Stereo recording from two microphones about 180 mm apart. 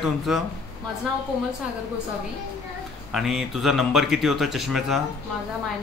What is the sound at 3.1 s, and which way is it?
Speech, centre (ahead or behind).